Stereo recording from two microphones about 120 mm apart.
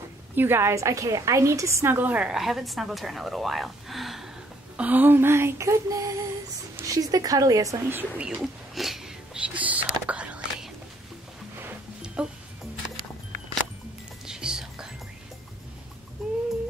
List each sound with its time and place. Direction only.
0.4 s a woman's voice: 20° right (ahead or behind); by 4.3 s centre (ahead or behind)
4.7 s a sound: 15° right (ahead or behind)
7.9 s whispering: 10° right (ahead or behind)
11.6 s music: 10° right (ahead or behind)
14.2 s whispering: 5° right (ahead or behind)
16.2 s a sound: centre (ahead or behind)